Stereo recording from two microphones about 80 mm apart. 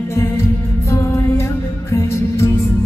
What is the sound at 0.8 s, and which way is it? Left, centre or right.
Music, left.